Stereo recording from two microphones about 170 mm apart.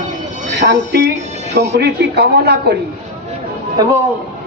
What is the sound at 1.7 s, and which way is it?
A woman's voice, 75° right (ahead or behind).